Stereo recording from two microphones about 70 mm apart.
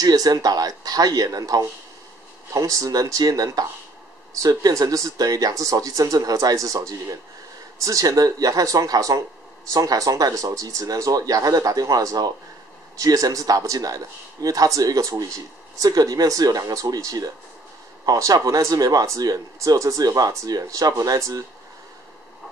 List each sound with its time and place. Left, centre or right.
0.0 s speech: right